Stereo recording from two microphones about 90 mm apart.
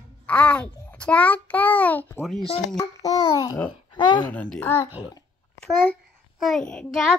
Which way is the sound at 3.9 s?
55° left (ahead or behind).